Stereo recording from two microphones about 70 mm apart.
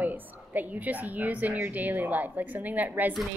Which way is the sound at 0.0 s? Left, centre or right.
Right.